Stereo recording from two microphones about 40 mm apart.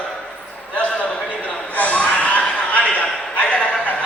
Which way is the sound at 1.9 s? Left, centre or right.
Left.